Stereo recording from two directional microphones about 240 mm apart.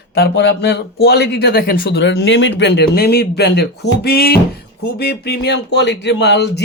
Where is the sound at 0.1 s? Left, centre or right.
Left.